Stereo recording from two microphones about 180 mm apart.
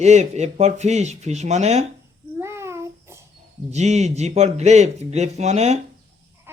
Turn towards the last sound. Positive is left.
turn(degrees=-40)  # may be behind; listen again after turning